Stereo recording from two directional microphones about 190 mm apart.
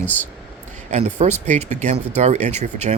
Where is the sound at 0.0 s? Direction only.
10° left (ahead or behind).